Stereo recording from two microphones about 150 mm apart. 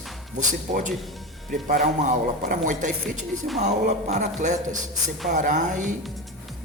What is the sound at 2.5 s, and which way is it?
Speech, 60° right (ahead or behind).